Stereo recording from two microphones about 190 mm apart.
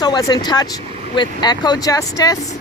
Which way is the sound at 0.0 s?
20° left (ahead or behind).